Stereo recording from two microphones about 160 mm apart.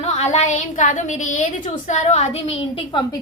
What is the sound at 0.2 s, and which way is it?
A woman's voice, 45° left (ahead or behind).